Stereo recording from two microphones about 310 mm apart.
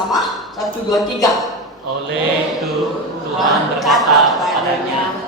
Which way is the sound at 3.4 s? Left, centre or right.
Centre.